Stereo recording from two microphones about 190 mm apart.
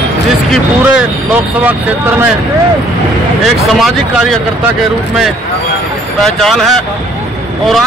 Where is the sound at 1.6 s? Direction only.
10° right (ahead or behind).